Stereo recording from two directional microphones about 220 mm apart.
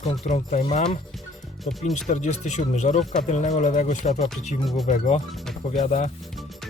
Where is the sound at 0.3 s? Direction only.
30° left (ahead or behind).